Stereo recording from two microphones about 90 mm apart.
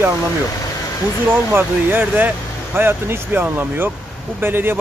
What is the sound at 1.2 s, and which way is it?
Speech, 25° right (ahead or behind).